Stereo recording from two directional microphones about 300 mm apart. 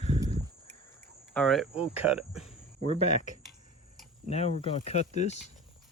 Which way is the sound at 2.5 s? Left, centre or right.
Left.